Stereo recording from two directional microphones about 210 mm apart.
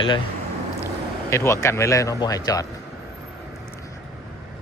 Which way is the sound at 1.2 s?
15° left (ahead or behind).